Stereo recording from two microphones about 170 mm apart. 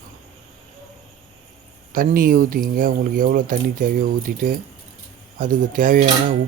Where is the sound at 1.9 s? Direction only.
55° right (ahead or behind).